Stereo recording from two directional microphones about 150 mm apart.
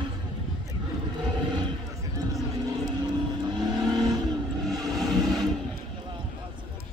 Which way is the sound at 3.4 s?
30° right (ahead or behind).